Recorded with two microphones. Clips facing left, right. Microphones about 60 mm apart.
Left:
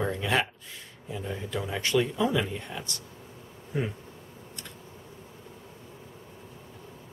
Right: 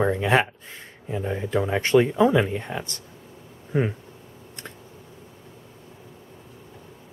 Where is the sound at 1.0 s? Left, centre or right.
Right.